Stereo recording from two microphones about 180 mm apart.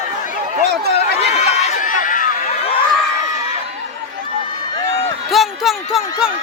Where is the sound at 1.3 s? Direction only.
40° left (ahead or behind).